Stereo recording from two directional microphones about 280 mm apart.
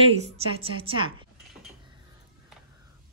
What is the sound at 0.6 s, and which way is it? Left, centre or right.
Speech, centre.